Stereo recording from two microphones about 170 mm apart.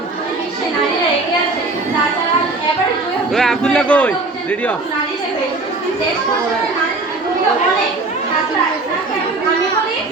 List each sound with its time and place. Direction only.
3.3 s a man's voice: centre (ahead or behind)